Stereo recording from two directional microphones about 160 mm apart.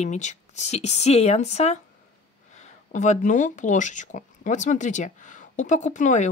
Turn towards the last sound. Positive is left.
turn(degrees=50)  # may be behind; listen again after turning